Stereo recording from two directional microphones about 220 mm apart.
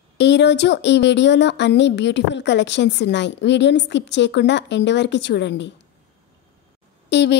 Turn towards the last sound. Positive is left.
turn(degrees=50)  # may be behind; listen again after turning